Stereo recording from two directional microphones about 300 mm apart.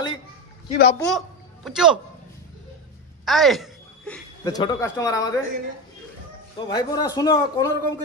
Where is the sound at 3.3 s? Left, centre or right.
Centre.